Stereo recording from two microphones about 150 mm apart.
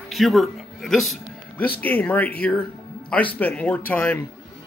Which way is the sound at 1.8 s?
10° left (ahead or behind).